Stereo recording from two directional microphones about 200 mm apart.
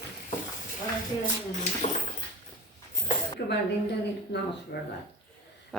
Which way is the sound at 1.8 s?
35° left (ahead or behind).